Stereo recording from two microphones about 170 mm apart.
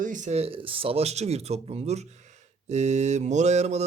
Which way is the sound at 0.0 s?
50° right (ahead or behind).